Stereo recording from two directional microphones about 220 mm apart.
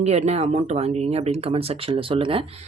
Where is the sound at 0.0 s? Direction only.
30° right (ahead or behind).